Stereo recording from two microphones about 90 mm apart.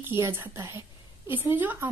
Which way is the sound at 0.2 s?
30° right (ahead or behind).